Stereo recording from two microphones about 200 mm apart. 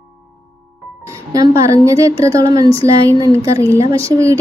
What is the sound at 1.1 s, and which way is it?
Speech, 15° right (ahead or behind).